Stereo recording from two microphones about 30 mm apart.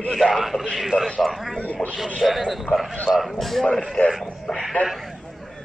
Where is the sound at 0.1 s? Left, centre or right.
Centre.